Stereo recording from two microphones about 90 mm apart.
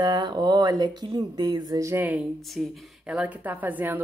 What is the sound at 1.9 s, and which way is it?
Speech, 20° right (ahead or behind).